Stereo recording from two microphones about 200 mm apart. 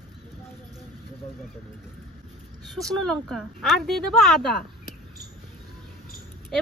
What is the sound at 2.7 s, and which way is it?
Speech, centre (ahead or behind).